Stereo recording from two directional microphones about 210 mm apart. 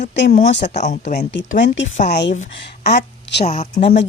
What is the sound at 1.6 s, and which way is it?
A woman's voice, 60° left (ahead or behind).